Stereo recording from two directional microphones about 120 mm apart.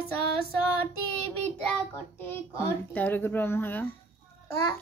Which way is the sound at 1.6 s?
15° left (ahead or behind).